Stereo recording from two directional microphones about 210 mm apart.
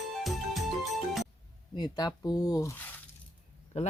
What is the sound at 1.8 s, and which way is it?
Speech, 20° left (ahead or behind).